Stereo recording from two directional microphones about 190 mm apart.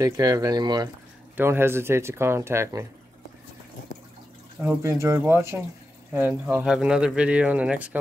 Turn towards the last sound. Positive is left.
turn(degrees=-5)  # may be behind; listen again after turning